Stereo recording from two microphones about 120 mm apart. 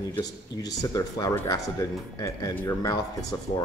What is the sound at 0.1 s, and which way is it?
Speech, 30° left (ahead or behind).